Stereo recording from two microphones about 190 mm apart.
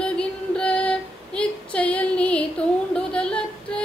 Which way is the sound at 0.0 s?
5° left (ahead or behind).